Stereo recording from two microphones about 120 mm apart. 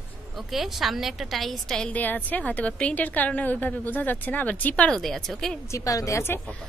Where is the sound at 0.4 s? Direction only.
Centre (ahead or behind).